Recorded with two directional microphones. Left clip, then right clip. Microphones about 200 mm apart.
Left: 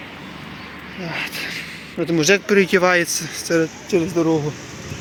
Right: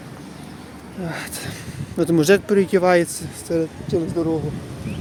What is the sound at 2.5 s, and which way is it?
Speech, 10° right (ahead or behind).